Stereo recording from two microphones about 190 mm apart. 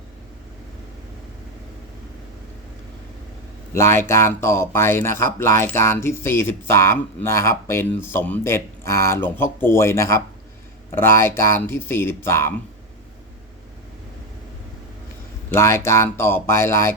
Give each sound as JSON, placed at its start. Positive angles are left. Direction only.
{"t": 3.8, "sound": "speech", "side_deg": 15}
{"t": 15.4, "sound": "speech", "side_deg": 15}